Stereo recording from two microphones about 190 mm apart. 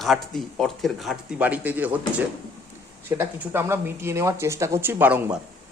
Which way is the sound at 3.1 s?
10° right (ahead or behind).